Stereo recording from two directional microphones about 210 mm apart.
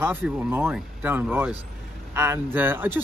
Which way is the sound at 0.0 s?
10° right (ahead or behind).